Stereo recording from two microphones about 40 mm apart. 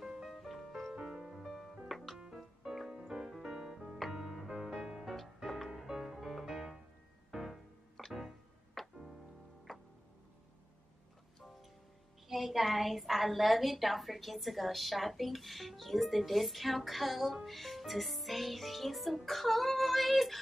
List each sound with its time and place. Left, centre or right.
0.0 s music: centre
2.9 s music: centre
5.5 s music: centre
8.0 s music: centre
12.3 s a woman's voice: centre